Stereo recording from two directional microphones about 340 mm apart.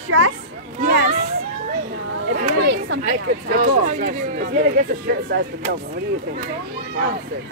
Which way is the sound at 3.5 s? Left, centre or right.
Right.